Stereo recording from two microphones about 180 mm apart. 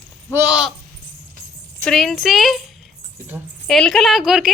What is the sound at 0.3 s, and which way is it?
Speech, 5° right (ahead or behind).